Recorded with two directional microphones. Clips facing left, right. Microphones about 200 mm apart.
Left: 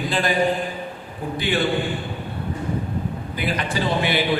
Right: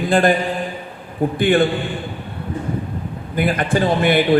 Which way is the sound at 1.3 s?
50° right (ahead or behind).